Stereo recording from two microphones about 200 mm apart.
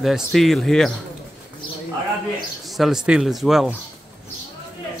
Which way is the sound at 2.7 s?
Centre (ahead or behind).